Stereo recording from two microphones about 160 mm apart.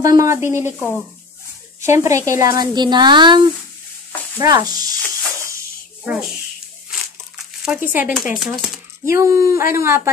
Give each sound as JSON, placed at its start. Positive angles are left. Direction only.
{"t": 0.0, "sound": "speech", "side_deg": -20}
{"t": 0.7, "sound": "speech", "side_deg": 5}
{"t": 1.9, "sound": "speech", "side_deg": -20}
{"t": 7.6, "sound": "speech", "side_deg": -10}
{"t": 9.0, "sound": "speech", "side_deg": -15}